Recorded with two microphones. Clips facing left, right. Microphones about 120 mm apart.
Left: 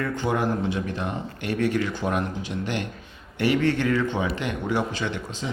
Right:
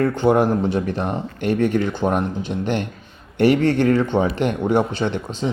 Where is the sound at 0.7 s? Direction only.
35° right (ahead or behind).